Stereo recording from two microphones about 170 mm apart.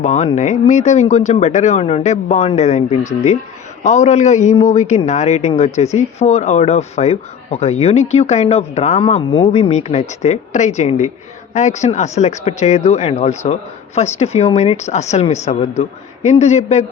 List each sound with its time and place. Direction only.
0.0 s a man's voice: 40° left (ahead or behind)